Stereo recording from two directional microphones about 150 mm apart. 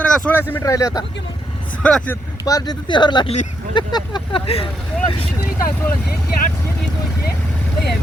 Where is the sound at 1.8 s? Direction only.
10° left (ahead or behind).